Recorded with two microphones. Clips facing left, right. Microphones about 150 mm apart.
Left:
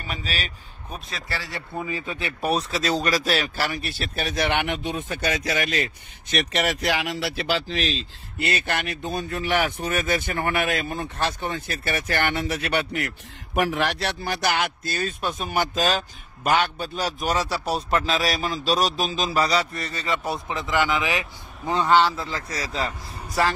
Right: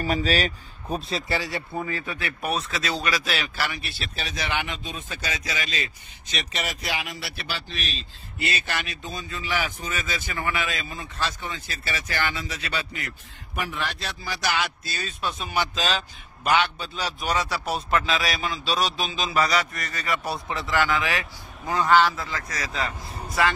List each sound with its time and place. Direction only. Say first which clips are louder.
0.0 s speech: right 8 dB; 40° right (ahead or behind)
1.3 s speech: right 4 dB; 15° right (ahead or behind)
1.9 s speech: left 1 dB; 20° left (ahead or behind); by 13.1 s 70° left (ahead or behind)
13.6 s a man's voice: left 8 dB; 90° left; by 22.8 s 30° left (ahead or behind)